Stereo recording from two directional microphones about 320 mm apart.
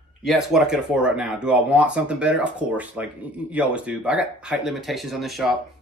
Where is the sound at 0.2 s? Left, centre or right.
Centre.